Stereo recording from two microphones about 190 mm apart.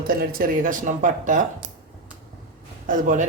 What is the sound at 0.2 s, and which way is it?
Speech, 50° right (ahead or behind).